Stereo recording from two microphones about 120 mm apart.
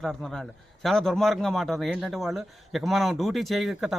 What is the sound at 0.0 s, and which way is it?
A man's voice, 5° left (ahead or behind).